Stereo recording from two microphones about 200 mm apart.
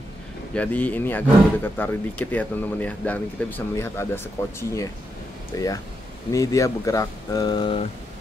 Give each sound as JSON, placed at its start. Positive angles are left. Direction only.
{"t": 0.6, "sound": "speech", "side_deg": 5}